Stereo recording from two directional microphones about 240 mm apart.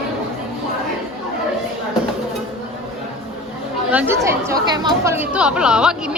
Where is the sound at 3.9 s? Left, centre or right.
Centre.